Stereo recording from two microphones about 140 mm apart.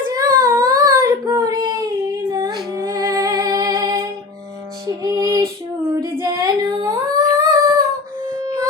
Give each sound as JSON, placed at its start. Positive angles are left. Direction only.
{"t": 0.1, "sound": "child singing", "side_deg": -25}
{"t": 2.3, "sound": "music", "side_deg": -30}
{"t": 6.0, "sound": "humming", "side_deg": -25}